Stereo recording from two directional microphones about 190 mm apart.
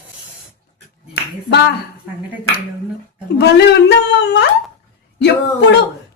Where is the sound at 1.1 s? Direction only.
65° left (ahead or behind).